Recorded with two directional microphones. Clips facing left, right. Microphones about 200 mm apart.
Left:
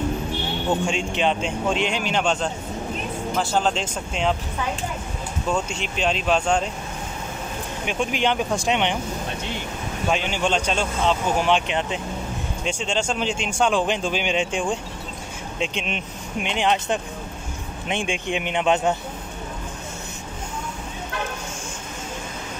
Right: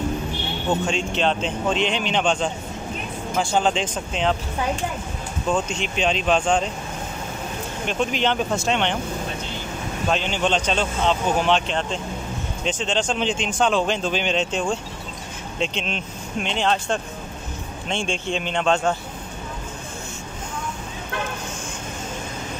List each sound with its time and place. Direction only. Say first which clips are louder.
0.8 s speech: even; 10° left (ahead or behind)
5.5 s speech: right 2 dB; 10° left (ahead or behind)
7.8 s speech: right 1 dB; 10° left (ahead or behind)
10.0 s speech: even; 10° left (ahead or behind)